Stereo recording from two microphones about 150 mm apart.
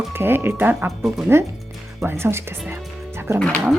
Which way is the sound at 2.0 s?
15° right (ahead or behind).